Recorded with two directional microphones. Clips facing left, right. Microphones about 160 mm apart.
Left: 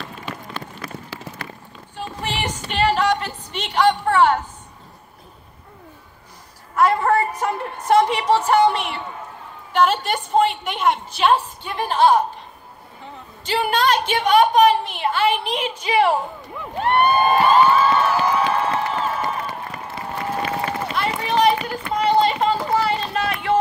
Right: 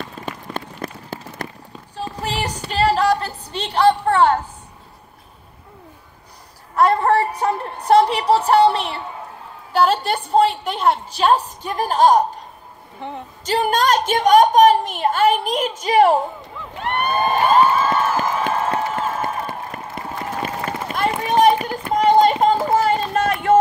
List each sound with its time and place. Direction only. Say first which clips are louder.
0.2 s run: right 2 dB; 50° right (ahead or behind)
2.0 s music: right 2 dB; 35° right (ahead or behind)
6.7 s a woman's voice: right 2 dB; 35° right (ahead or behind)
13.0 s speech: right 8 dB; 65° right (ahead or behind)
13.4 s a woman's voice: right 2 dB; 40° right (ahead or behind)
17.5 s a sound: right 1 dB; 45° right (ahead or behind)
20.9 s run: right 5 dB; 45° right (ahead or behind)